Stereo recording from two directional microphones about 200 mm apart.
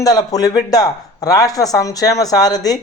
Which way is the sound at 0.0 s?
20° left (ahead or behind).